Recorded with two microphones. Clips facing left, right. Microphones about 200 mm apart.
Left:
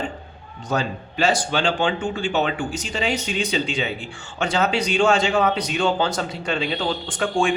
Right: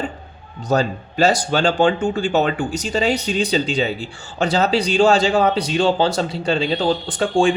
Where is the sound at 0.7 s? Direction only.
40° right (ahead or behind).